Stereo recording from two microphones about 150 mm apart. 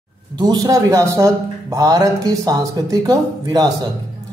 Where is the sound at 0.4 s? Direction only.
25° right (ahead or behind).